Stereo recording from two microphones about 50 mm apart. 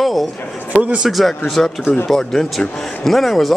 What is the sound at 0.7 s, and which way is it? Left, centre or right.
Speech, right.